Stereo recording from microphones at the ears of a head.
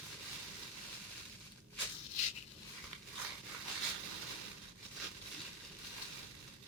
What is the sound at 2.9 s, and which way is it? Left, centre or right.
Crushing, right.